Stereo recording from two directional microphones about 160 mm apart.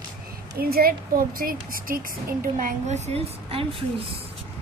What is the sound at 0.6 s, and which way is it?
A woman's voice, 70° right (ahead or behind).